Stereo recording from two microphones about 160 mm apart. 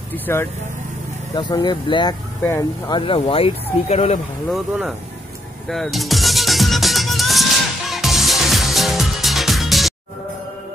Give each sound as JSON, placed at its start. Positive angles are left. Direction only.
{"t": 0.1, "sound": "speech", "side_deg": 15}
{"t": 1.3, "sound": "speech", "side_deg": 25}
{"t": 4.5, "sound": "speech", "side_deg": -5}
{"t": 5.7, "sound": "music", "side_deg": 0}